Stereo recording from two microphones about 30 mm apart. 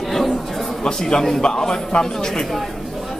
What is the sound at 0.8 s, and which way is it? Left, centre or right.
A man's voice, left.